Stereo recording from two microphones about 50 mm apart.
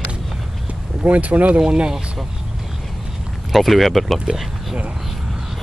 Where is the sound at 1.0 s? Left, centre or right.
Right.